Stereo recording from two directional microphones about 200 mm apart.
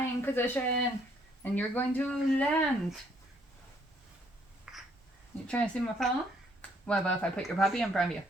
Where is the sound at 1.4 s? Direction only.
10° left (ahead or behind).